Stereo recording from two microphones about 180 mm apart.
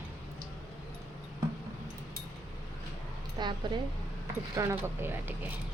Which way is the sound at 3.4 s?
25° right (ahead or behind).